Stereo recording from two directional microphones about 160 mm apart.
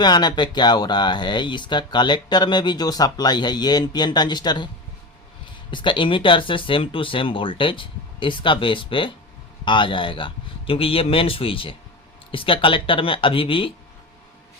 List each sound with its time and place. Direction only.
0.0 s speech: 25° left (ahead or behind)
5.7 s speech: 30° left (ahead or behind)